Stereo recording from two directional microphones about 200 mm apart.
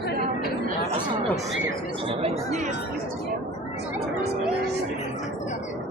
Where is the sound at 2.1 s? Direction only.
35° right (ahead or behind).